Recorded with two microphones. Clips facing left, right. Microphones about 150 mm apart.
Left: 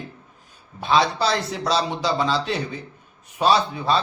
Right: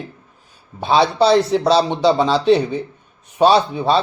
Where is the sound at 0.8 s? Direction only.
30° right (ahead or behind).